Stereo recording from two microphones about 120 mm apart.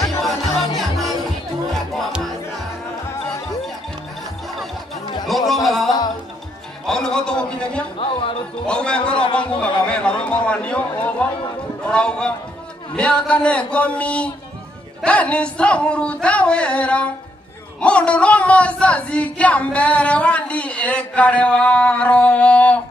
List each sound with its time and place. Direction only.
0.0 s music: centre (ahead or behind)
5.5 s a sound: centre (ahead or behind)
8.0 s music: 50° left (ahead or behind)
8.6 s a man's voice: 10° left (ahead or behind)